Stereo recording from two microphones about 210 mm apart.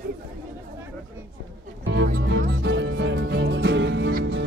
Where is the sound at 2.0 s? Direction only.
45° right (ahead or behind).